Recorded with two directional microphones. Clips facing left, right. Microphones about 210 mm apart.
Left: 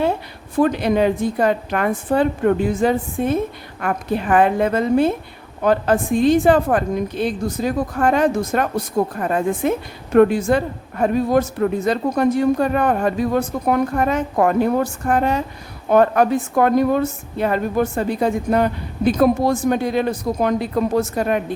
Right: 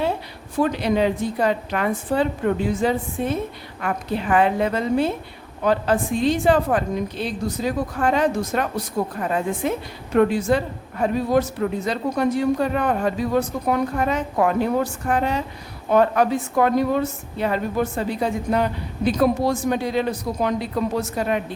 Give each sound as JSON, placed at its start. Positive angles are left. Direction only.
{"t": 0.6, "sound": "a woman's voice", "side_deg": 50}